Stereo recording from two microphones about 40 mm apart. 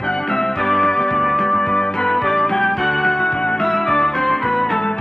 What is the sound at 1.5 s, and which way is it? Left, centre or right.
Music, centre.